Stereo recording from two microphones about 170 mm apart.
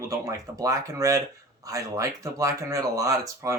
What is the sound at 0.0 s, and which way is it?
Speech, 20° right (ahead or behind).